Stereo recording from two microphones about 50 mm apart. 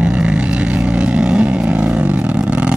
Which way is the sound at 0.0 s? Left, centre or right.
Right.